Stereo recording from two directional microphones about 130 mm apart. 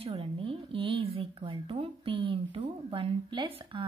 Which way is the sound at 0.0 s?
45° right (ahead or behind).